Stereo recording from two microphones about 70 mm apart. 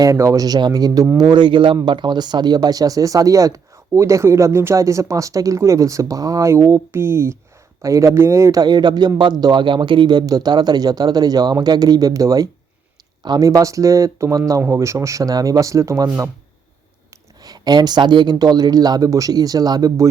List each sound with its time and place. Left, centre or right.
0.0 s speech: right
1.1 s speech: right
6.5 s speech: right
7.8 s speech: right
8.5 s a man's voice: right
10.1 s speech: right
17.4 s speech: right